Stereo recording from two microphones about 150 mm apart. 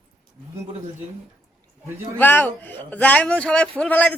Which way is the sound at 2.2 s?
10° left (ahead or behind).